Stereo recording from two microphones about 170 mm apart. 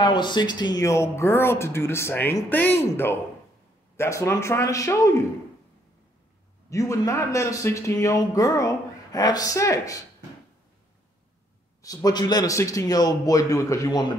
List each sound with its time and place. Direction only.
0.0 s speech: 25° left (ahead or behind)
6.7 s speech: 20° left (ahead or behind)
11.8 s speech: 20° left (ahead or behind)